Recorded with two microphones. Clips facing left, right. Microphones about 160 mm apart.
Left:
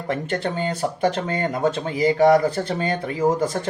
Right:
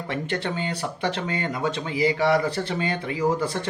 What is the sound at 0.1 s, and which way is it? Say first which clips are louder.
Speech: left 4 dB; 45° left (ahead or behind).